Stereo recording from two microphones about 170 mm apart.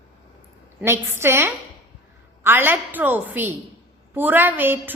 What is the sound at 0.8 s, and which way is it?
A woman's voice, 15° right (ahead or behind).